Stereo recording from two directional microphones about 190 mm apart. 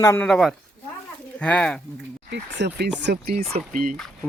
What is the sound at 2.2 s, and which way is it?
Speech, 65° right (ahead or behind).